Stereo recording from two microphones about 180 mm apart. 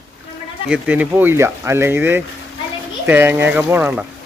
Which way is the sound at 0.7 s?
10° right (ahead or behind).